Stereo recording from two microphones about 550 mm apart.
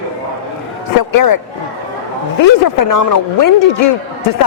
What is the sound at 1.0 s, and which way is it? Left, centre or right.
Speech, left.